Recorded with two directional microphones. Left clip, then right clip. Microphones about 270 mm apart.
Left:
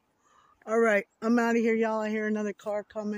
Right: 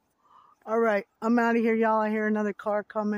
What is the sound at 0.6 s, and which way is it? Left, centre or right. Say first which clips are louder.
Speech: even; centre.